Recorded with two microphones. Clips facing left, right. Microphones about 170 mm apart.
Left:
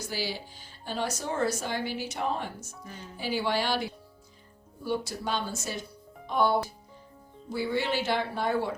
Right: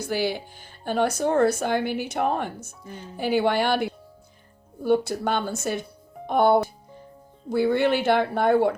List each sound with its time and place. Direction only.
0.1 s speech: 55° right (ahead or behind)